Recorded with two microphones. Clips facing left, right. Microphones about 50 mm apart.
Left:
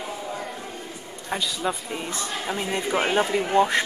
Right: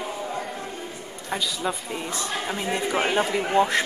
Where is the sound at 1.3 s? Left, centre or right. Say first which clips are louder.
Left 1 dB; centre.